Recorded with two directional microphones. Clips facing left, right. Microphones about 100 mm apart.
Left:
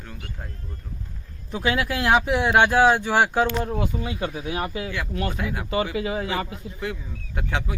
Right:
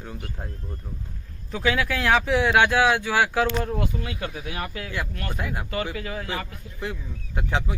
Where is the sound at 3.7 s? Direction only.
5° left (ahead or behind).